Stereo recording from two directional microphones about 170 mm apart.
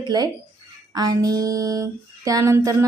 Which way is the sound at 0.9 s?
20° right (ahead or behind).